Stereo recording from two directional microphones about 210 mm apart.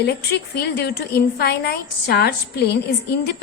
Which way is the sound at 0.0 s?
50° left (ahead or behind).